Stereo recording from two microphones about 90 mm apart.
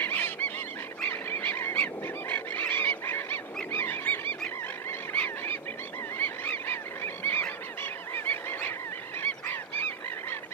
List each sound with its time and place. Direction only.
0.0 s goose: 20° left (ahead or behind)